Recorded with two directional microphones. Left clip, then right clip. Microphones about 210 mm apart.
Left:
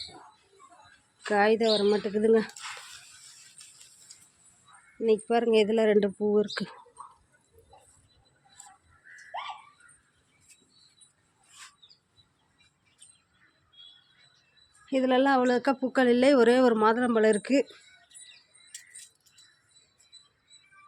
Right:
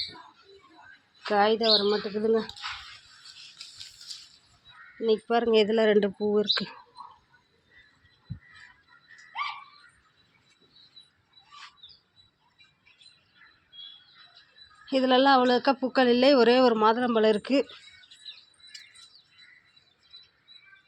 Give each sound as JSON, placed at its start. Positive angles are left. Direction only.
{"t": 1.2, "sound": "a woman's voice", "side_deg": 15}
{"t": 1.6, "sound": "speech", "side_deg": 25}
{"t": 4.9, "sound": "speech", "side_deg": 10}
{"t": 14.8, "sound": "speech", "side_deg": 0}